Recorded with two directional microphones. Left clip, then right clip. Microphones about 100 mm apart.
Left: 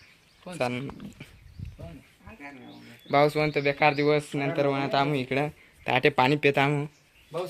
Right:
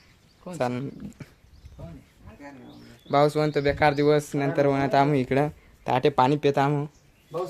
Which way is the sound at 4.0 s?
45° right (ahead or behind).